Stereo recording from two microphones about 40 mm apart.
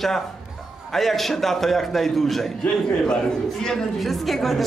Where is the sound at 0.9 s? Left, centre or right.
Centre.